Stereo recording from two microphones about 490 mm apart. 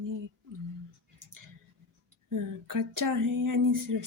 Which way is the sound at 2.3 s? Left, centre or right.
Right.